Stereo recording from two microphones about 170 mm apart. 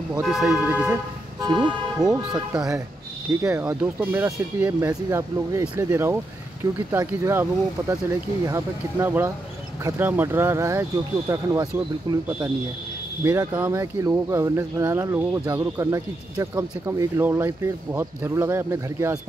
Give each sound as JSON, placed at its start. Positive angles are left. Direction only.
{"t": 0.2, "sound": "speech", "side_deg": 0}
{"t": 1.4, "sound": "speech", "side_deg": -25}
{"t": 2.0, "sound": "speech", "side_deg": 0}
{"t": 3.3, "sound": "speech", "side_deg": -20}
{"t": 3.6, "sound": "speech", "side_deg": -10}
{"t": 13.5, "sound": "speech", "side_deg": -10}